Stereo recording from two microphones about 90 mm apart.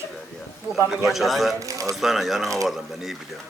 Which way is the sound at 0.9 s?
Centre (ahead or behind).